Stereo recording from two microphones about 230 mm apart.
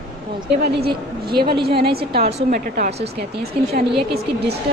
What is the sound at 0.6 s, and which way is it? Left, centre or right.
A woman's voice, right.